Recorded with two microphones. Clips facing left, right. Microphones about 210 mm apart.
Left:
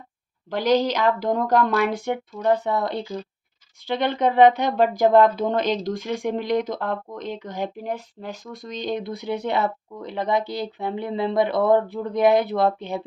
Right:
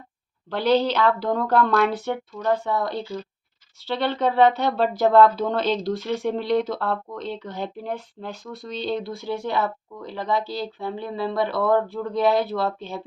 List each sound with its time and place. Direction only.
0.5 s a woman's voice: 10° left (ahead or behind)